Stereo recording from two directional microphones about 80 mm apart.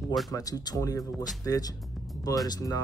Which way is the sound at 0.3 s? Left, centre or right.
Left.